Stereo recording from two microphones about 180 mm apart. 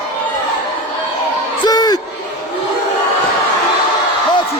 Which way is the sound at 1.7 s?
20° left (ahead or behind).